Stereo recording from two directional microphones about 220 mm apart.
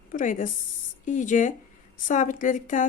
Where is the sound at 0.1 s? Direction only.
35° left (ahead or behind).